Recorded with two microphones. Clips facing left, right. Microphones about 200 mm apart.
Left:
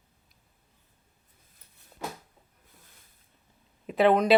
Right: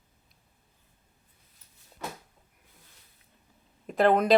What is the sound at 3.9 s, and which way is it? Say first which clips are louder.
Speech: left 1 dB; centre (ahead or behind).